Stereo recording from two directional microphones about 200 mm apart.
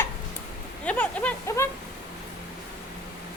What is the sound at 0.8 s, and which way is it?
Speech, 5° left (ahead or behind).